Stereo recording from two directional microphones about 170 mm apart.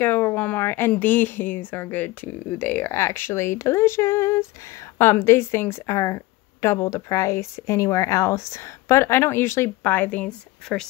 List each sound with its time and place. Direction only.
0.0 s a woman's voice: 10° left (ahead or behind)